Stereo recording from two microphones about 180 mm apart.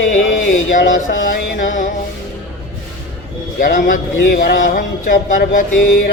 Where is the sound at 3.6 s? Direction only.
50° left (ahead or behind).